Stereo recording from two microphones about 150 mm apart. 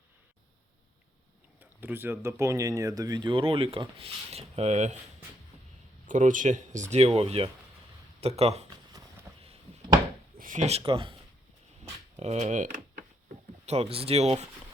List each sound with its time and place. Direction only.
1.8 s speech: 15° right (ahead or behind); by 4.9 s 50° right (ahead or behind)
6.1 s speech: 60° right (ahead or behind)
6.9 s speech: 45° right (ahead or behind)
9.3 s a sound: 15° right (ahead or behind)
10.3 s speech: 60° right (ahead or behind); by 11.2 s 35° right (ahead or behind)
12.1 s a sound: 45° right (ahead or behind)
13.7 s speech: 40° right (ahead or behind)